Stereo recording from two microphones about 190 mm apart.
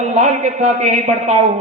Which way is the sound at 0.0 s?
40° right (ahead or behind).